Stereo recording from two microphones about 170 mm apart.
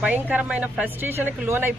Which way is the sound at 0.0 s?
10° right (ahead or behind).